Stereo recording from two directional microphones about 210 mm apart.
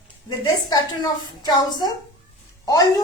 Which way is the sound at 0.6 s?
20° left (ahead or behind).